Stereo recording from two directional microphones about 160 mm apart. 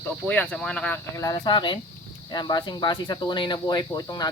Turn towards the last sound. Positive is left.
turn(degrees=25)  # may be behind; listen again after turning